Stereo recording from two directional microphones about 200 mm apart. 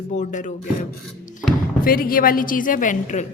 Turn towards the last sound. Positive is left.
turn(degrees=40)  # may be behind; listen again after turning